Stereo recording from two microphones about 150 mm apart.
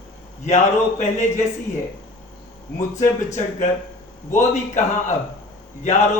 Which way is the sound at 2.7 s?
55° left (ahead or behind).